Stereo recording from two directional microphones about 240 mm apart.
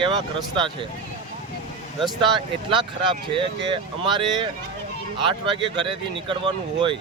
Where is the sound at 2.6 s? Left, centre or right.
Right.